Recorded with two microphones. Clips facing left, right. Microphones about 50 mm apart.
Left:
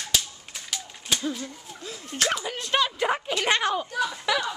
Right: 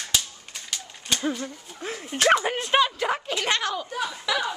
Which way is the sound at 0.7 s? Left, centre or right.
Centre.